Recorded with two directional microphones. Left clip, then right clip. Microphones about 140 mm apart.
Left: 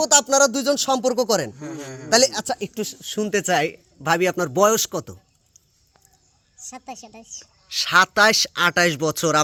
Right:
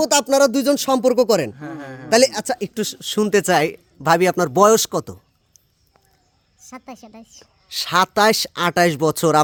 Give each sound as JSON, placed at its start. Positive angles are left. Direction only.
{"t": 0.0, "sound": "speech", "side_deg": -85}
{"t": 1.5, "sound": "a man's voice", "side_deg": -15}
{"t": 2.0, "sound": "speech", "side_deg": -70}
{"t": 6.6, "sound": "a woman's voice", "side_deg": -20}
{"t": 7.7, "sound": "speech", "side_deg": -40}